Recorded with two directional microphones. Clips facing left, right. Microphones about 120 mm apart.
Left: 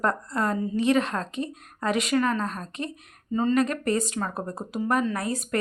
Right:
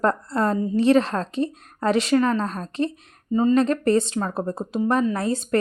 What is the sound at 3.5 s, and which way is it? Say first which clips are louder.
Speech: right 5 dB; 30° right (ahead or behind).